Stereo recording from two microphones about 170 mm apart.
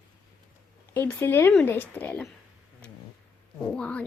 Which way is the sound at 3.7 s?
5° left (ahead or behind).